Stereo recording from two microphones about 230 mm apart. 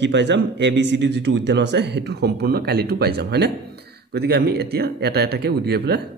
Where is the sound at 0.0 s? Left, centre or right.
Right.